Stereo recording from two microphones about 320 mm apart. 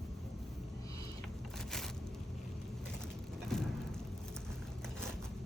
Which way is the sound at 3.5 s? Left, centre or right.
Centre.